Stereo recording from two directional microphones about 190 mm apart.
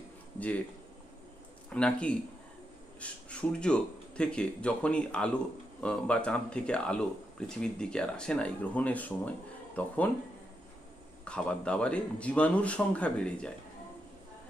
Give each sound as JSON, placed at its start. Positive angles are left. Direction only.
{"t": 1.7, "sound": "a man's voice", "side_deg": 5}
{"t": 11.2, "sound": "speech", "side_deg": 5}